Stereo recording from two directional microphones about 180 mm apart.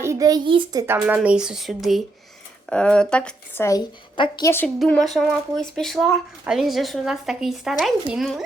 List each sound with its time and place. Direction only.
0.0 s a child's voice: 20° right (ahead or behind)
1.0 s a woman's voice: 10° right (ahead or behind); by 4.5 s 20° left (ahead or behind)
4.8 s speech: centre (ahead or behind)